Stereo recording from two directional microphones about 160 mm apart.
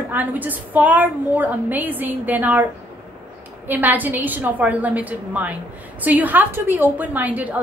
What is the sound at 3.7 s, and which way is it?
A woman's voice, 10° right (ahead or behind).